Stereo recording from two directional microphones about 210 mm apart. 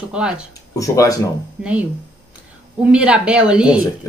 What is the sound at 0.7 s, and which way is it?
Speech, 15° left (ahead or behind).